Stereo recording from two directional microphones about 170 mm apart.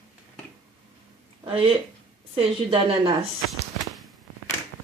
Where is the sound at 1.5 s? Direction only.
30° right (ahead or behind).